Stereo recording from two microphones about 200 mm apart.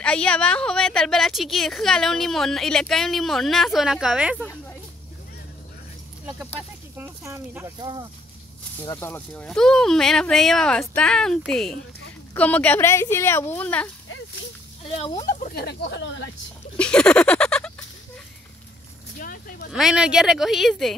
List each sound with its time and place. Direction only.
0.0 s a woman's voice: 5° left (ahead or behind)
7.0 s speech: 10° right (ahead or behind)
8.8 s a woman's voice: 15° left (ahead or behind)
15.0 s speech: 30° left (ahead or behind)
15.5 s speech: 55° left (ahead or behind)
16.7 s a sound: 5° left (ahead or behind)
19.1 s a sound: 45° left (ahead or behind)
19.7 s a woman's voice: 5° right (ahead or behind)